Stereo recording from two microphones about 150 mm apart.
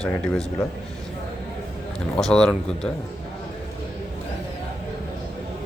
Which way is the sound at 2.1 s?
5° left (ahead or behind).